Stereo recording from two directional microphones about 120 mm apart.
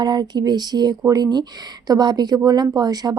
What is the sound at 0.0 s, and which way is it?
Speech, 35° right (ahead or behind).